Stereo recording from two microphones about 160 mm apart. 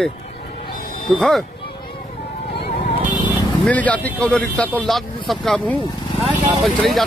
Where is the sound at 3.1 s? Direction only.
30° left (ahead or behind).